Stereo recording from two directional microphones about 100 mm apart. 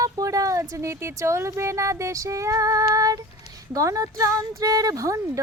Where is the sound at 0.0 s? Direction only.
35° right (ahead or behind).